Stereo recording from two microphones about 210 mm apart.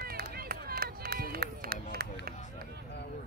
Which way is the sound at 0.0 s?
45° right (ahead or behind).